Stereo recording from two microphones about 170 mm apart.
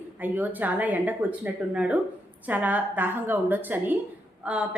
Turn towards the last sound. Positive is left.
turn(degrees=-5)  # may be behind; listen again after turning